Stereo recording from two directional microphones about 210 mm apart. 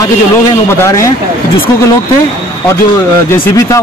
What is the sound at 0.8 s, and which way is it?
Speech, 15° left (ahead or behind).